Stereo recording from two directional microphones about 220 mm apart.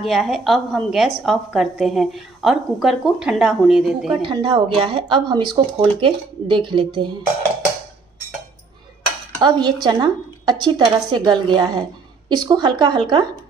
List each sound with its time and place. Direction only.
0.0 s a woman's voice: centre (ahead or behind)
4.2 s speech: 20° right (ahead or behind)
9.4 s speech: 20° right (ahead or behind)